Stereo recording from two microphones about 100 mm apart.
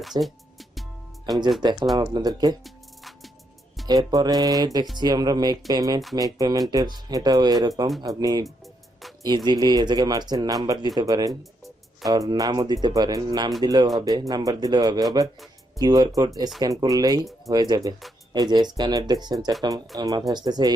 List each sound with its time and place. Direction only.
0.0 s speech: centre (ahead or behind)
1.3 s speech: 40° right (ahead or behind)
3.8 s speech: 40° right (ahead or behind)